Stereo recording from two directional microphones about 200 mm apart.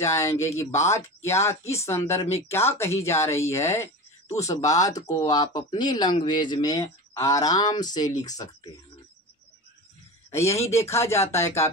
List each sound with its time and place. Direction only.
0.0 s speech: 15° left (ahead or behind)
10.3 s speech: 15° left (ahead or behind)